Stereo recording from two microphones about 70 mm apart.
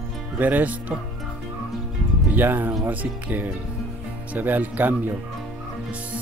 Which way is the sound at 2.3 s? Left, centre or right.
Right.